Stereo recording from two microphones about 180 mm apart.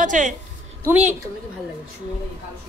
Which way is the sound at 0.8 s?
10° right (ahead or behind).